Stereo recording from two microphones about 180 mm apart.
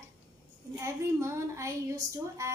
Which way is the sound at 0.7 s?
15° right (ahead or behind).